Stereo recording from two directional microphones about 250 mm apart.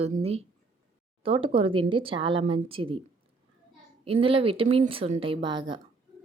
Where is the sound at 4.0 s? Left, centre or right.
Right.